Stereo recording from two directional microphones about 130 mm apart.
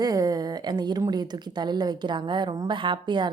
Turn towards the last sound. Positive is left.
turn(degrees=-35)  # may be behind; listen again after turning